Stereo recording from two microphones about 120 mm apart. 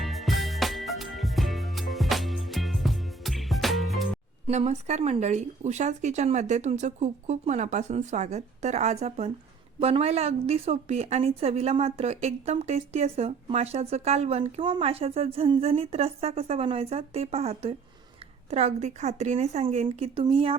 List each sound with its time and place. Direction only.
0.0 s music: centre (ahead or behind)
4.4 s a woman's voice: 65° right (ahead or behind)
14.6 s a woman's voice: 50° right (ahead or behind)
18.5 s a woman's voice: 65° right (ahead or behind)
20.3 s speech: 50° right (ahead or behind)